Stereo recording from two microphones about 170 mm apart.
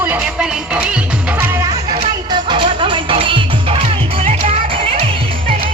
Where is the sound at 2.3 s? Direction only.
30° right (ahead or behind).